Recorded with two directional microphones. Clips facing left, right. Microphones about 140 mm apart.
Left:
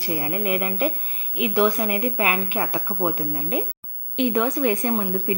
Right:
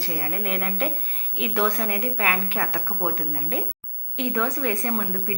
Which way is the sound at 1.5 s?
20° left (ahead or behind).